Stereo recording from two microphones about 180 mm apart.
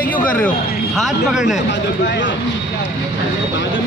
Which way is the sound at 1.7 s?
80° left.